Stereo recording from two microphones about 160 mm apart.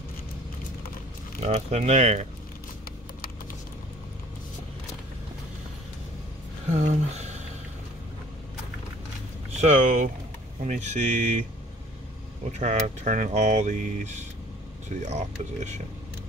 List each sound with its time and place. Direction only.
1.4 s speech: 40° right (ahead or behind)
6.7 s speech: 45° right (ahead or behind)
9.6 s speech: 50° right (ahead or behind)
12.5 s speech: 50° right (ahead or behind)